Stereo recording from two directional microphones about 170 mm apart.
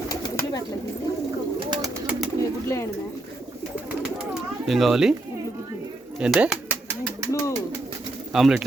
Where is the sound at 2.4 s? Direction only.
15° left (ahead or behind).